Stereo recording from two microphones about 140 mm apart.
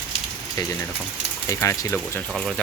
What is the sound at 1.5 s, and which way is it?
Speech, 20° left (ahead or behind).